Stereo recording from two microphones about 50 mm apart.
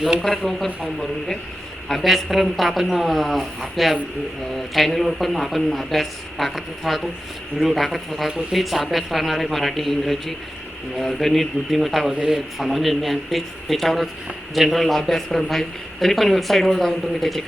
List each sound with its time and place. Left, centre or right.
0.0 s speech: centre
0.3 s a man's voice: centre
1.9 s a man's voice: centre